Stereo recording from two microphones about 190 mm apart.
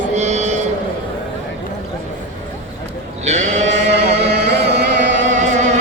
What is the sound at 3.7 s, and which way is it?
Chant, 65° right (ahead or behind).